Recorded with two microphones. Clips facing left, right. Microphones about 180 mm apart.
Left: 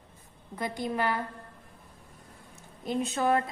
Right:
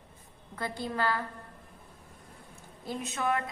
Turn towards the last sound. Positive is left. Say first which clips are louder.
# left 5 dB
turn(degrees=35)  # may be behind; listen again after turning